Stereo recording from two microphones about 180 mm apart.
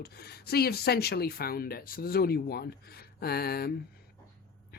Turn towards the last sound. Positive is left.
turn(degrees=60)  # may be behind; listen again after turning